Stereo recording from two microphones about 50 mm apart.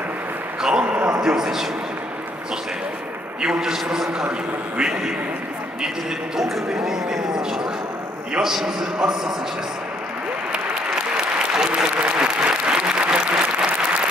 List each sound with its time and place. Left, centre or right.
0.6 s a sound: centre
1.2 s speech: centre
3.4 s speech: centre
4.2 s a man's voice: right
6.3 s speech: centre
11.1 s applause: centre